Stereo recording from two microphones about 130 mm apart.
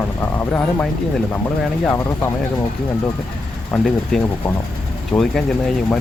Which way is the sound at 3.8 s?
5° left (ahead or behind).